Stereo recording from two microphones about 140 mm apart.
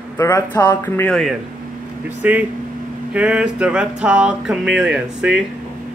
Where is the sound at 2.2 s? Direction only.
10° right (ahead or behind).